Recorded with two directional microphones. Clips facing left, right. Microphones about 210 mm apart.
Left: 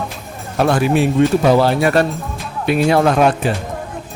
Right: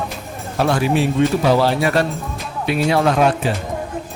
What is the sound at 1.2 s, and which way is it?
Speech, 45° left (ahead or behind).